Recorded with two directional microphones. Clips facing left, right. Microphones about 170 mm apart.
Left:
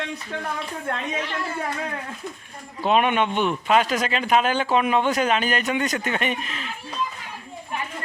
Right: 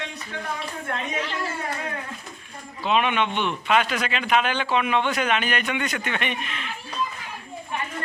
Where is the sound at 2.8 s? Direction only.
45° left (ahead or behind).